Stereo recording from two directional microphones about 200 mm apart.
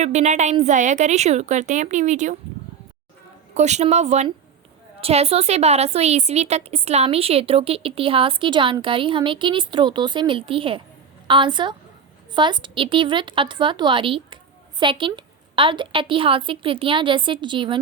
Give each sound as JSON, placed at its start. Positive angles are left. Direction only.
{"t": 0.0, "sound": "a woman's voice", "side_deg": -35}
{"t": 3.5, "sound": "a woman's voice", "side_deg": -35}